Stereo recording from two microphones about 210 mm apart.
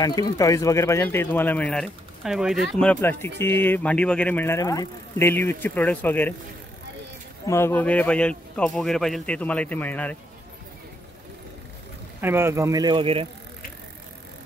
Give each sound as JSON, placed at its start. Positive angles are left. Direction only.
{"t": 0.0, "sound": "speech", "side_deg": 15}
{"t": 7.4, "sound": "speech", "side_deg": 10}
{"t": 12.2, "sound": "speech", "side_deg": -10}